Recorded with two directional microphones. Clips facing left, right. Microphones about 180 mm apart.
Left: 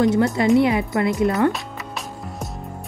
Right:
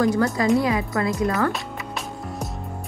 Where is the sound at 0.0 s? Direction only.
25° left (ahead or behind).